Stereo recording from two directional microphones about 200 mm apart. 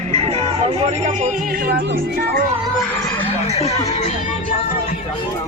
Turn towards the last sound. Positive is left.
turn(degrees=30)  # may be behind; listen again after turning